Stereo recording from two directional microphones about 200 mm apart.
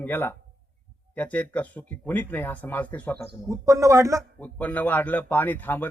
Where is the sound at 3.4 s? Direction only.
15° right (ahead or behind).